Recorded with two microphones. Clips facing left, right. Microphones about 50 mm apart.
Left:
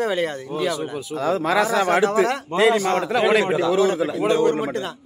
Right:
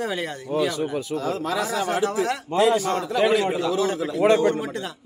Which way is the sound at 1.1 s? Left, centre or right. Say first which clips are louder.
Left 9 dB; left.